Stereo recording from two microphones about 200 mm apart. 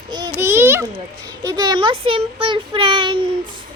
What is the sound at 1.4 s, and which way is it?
Speech, 20° right (ahead or behind).